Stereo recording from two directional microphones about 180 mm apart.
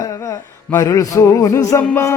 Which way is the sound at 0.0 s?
15° left (ahead or behind).